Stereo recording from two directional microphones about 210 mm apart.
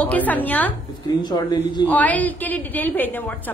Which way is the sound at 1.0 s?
20° left (ahead or behind).